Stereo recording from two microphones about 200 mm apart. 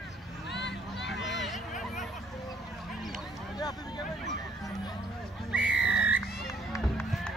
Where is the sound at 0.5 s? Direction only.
60° left (ahead or behind).